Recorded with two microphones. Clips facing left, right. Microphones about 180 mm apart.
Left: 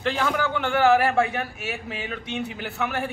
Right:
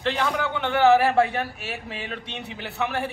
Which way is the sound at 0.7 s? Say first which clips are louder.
Right 2 dB; 25° right (ahead or behind).